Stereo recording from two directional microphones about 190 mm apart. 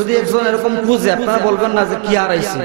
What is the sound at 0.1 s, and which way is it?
A man's voice, 15° right (ahead or behind).